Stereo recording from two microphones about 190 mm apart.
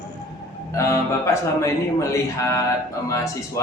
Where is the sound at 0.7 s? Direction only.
15° left (ahead or behind).